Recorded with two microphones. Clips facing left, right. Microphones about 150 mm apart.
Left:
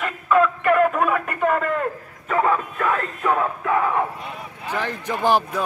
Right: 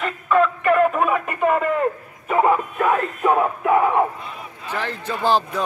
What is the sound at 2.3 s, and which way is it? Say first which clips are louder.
Music: right 3 dB; 20° right (ahead or behind).